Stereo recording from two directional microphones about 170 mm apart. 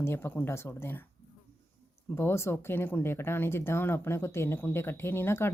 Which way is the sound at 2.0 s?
15° left (ahead or behind).